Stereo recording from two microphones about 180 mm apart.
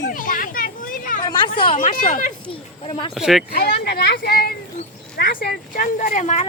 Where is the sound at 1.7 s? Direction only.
50° left (ahead or behind).